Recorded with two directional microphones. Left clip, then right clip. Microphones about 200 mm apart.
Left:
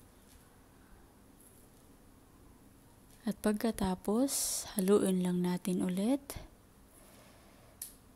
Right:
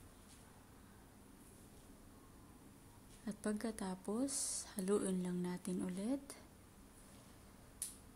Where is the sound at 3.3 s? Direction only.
35° left (ahead or behind).